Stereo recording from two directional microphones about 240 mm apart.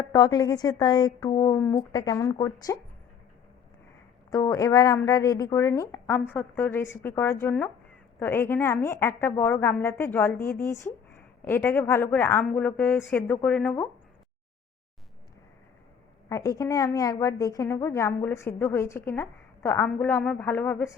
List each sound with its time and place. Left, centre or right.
0.1 s a woman's voice: centre
4.3 s a woman's voice: centre
16.3 s a woman's voice: centre